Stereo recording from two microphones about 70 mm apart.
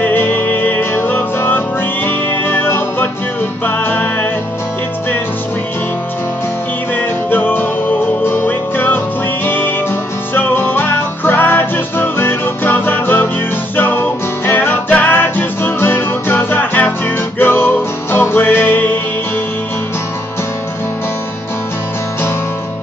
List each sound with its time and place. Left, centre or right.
0.0 s music: left
7.0 s music: left